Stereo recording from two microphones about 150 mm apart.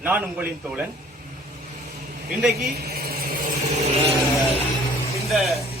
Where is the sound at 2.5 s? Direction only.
90° right.